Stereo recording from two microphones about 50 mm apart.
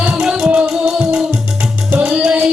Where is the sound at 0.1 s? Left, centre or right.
Centre.